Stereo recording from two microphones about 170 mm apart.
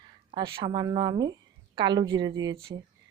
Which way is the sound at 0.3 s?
30° right (ahead or behind).